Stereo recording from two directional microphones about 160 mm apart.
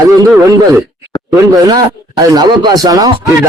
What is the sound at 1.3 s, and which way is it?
Speech, 25° right (ahead or behind).